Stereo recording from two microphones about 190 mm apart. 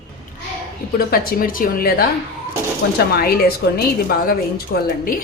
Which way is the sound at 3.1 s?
55° left (ahead or behind).